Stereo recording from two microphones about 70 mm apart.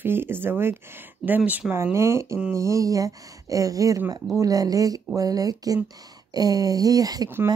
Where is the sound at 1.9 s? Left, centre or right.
Right.